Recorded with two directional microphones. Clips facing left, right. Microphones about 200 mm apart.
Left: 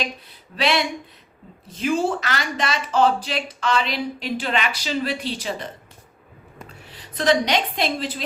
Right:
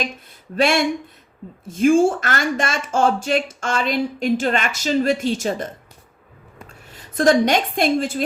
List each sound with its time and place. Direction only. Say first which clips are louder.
0.5 s speech: right 4 dB; 50° right (ahead or behind)
6.7 s a woman's voice: even; 45° right (ahead or behind)